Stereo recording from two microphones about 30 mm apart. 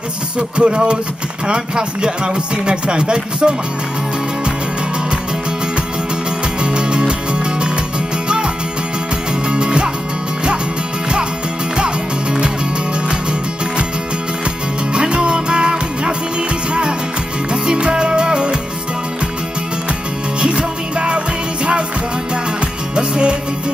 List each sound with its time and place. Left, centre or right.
0.6 s speech: right
6.6 s music: right
9.5 s music: right
11.7 s music: right
15.0 s music: right
17.5 s music: right
20.3 s music: right
22.9 s music: right